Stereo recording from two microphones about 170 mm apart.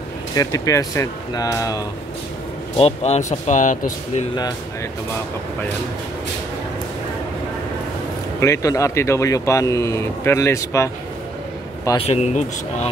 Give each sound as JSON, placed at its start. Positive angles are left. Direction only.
{"t": 0.4, "sound": "speech", "side_deg": 20}
{"t": 2.8, "sound": "speech", "side_deg": 40}
{"t": 8.4, "sound": "speech", "side_deg": 15}
{"t": 12.0, "sound": "speech", "side_deg": 40}